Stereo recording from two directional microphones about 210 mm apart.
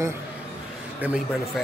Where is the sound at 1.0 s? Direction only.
5° right (ahead or behind).